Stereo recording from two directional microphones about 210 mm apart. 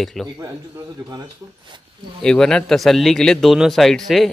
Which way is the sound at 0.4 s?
20° right (ahead or behind).